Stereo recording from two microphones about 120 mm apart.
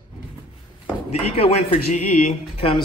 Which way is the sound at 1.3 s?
55° left (ahead or behind).